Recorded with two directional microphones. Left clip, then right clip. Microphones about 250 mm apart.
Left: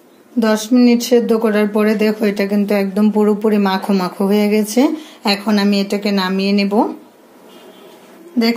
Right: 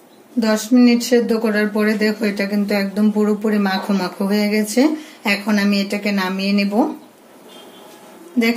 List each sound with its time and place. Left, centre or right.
0.4 s a woman's voice: left